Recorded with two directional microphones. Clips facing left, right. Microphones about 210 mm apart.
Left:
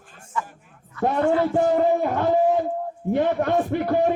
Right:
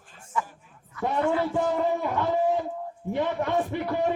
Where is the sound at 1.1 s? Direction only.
45° left (ahead or behind).